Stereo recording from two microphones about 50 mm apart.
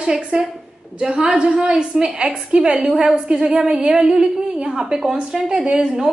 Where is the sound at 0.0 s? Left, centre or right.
Centre.